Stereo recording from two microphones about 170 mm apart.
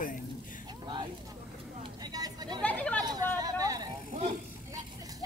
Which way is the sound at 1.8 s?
25° right (ahead or behind).